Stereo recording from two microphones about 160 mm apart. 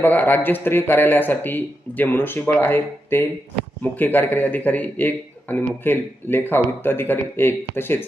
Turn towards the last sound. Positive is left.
turn(degrees=15)  # may be behind; listen again after turning